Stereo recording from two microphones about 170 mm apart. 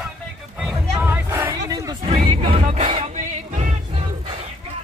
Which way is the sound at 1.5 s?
20° right (ahead or behind).